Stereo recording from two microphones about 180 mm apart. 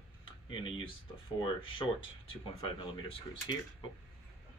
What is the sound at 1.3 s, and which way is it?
Speech, 25° left (ahead or behind).